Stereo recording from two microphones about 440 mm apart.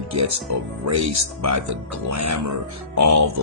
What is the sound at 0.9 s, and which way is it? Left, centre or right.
Speech, right.